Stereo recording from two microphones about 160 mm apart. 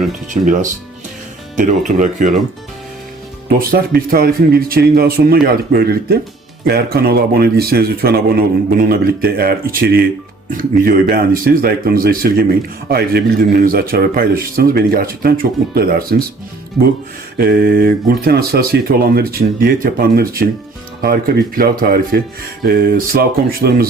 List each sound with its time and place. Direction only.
0.3 s speech: 55° right (ahead or behind)
3.6 s speech: 70° right (ahead or behind)
17.3 s speech: 65° right (ahead or behind)